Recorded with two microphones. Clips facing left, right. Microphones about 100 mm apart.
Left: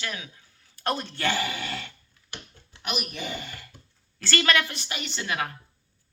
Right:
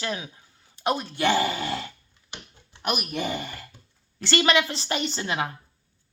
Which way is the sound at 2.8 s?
50° right (ahead or behind).